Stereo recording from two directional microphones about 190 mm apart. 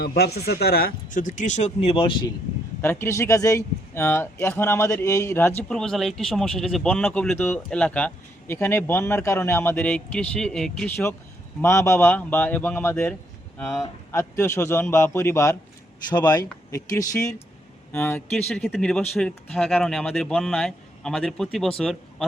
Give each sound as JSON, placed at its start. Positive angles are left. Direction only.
{"t": 0.0, "sound": "speech", "side_deg": 55}
{"t": 2.8, "sound": "speech", "side_deg": 10}
{"t": 13.6, "sound": "speech", "side_deg": 0}
{"t": 14.1, "sound": "speech", "side_deg": 15}